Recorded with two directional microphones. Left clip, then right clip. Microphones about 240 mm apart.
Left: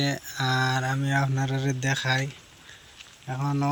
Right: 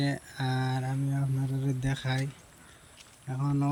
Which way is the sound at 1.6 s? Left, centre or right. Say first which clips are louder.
Left 9 dB; centre.